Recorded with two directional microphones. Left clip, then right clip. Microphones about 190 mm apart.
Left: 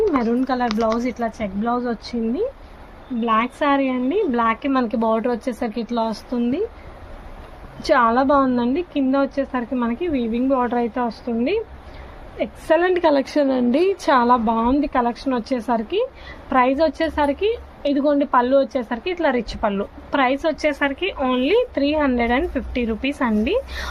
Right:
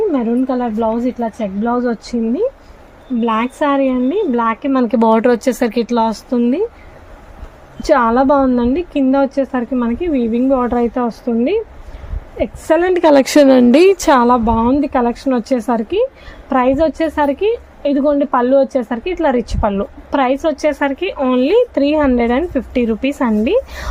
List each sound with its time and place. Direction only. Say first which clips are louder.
0.2 s a woman's voice: right 3 dB; 40° right (ahead or behind)
7.8 s a woman's voice: right 4 dB; 45° right (ahead or behind)